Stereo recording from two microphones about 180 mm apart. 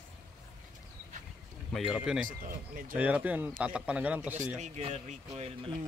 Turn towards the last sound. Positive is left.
turn(degrees=-35)  # may be behind; listen again after turning